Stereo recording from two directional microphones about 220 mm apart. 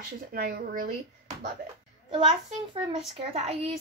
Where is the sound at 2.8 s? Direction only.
25° right (ahead or behind).